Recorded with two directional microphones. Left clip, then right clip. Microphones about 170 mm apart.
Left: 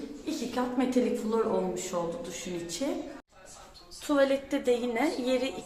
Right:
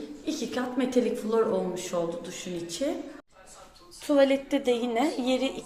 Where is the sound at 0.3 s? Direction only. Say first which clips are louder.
Right 1 dB; 15° right (ahead or behind).